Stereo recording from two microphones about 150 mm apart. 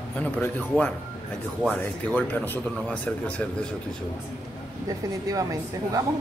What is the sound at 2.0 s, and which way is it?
Speech, 10° left (ahead or behind).